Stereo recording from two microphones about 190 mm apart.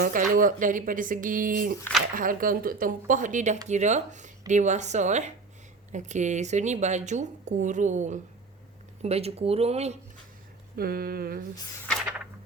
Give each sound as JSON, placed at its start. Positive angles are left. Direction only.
{"t": 0.0, "sound": "speech", "side_deg": -45}
{"t": 10.8, "sound": "speech", "side_deg": -50}